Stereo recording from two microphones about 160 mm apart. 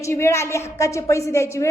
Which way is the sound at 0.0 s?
15° left (ahead or behind).